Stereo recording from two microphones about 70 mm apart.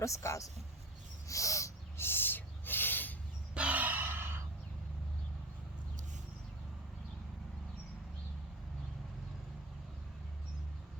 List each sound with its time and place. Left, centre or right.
0.0 s a man's voice: left
1.3 s owl: left
2.0 s a sound: left
3.5 s gasp: centre